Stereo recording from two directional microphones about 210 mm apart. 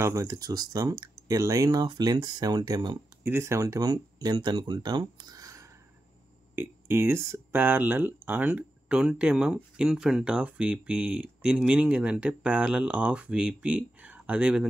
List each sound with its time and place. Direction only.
0.0 s speech: 15° right (ahead or behind)